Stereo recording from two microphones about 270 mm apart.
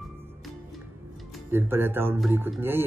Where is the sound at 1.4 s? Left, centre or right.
Centre.